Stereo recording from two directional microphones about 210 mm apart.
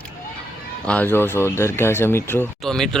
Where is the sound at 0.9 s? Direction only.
10° left (ahead or behind).